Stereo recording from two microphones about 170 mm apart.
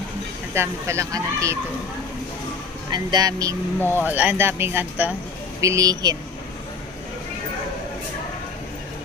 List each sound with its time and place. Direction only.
0.5 s speech: 15° right (ahead or behind)
2.9 s speech: 25° right (ahead or behind)
3.8 s speech: 10° left (ahead or behind)
4.0 s speech: 10° right (ahead or behind)